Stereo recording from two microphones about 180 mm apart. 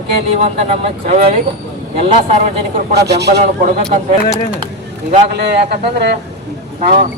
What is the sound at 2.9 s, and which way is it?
Speech, 65° right (ahead or behind).